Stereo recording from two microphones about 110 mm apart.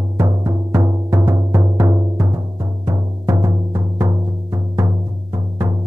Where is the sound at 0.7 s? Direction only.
25° right (ahead or behind).